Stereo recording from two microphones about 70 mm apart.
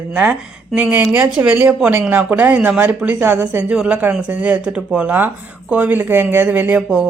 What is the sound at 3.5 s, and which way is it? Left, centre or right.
Speech, centre.